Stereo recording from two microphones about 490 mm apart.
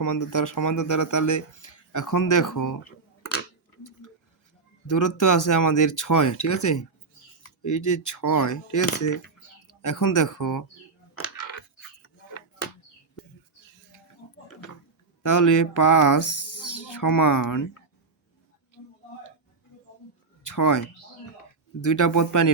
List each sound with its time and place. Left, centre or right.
0.0 s speech: left
4.9 s speech: left
15.2 s speech: left
20.4 s a sound: left
21.8 s speech: left